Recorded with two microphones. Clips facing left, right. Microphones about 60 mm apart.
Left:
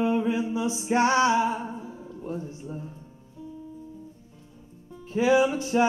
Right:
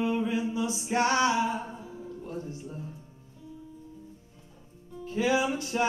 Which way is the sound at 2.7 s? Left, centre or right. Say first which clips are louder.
Left 3 dB; centre.